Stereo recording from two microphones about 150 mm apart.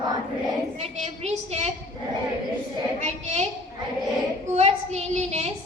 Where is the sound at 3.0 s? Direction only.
45° right (ahead or behind).